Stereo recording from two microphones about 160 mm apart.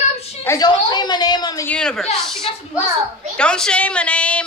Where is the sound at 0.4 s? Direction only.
15° left (ahead or behind).